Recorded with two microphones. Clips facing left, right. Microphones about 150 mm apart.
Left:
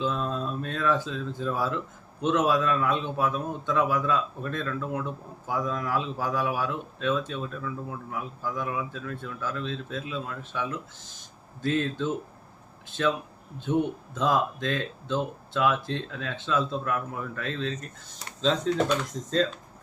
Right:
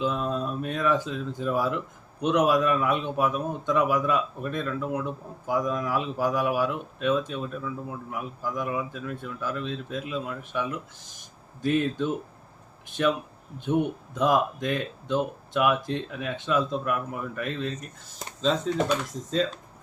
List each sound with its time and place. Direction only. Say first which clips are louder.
0.0 s speech: right 2 dB; 15° right (ahead or behind)